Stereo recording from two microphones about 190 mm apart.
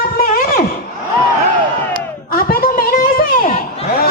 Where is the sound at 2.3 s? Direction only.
50° left (ahead or behind).